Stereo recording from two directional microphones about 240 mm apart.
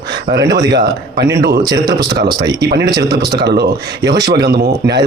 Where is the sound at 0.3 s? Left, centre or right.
Centre.